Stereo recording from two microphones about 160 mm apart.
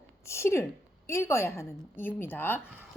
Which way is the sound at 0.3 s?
15° left (ahead or behind).